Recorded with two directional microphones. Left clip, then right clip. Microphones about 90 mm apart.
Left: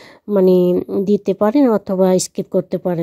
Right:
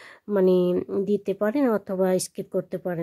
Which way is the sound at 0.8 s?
10° left (ahead or behind).